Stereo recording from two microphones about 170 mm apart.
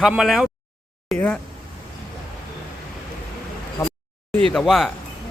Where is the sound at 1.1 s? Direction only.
Centre (ahead or behind).